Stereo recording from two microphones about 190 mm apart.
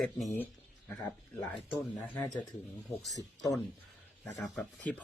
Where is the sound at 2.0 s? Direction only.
5° left (ahead or behind).